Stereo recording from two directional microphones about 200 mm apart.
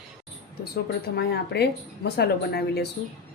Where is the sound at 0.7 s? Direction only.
55° left (ahead or behind).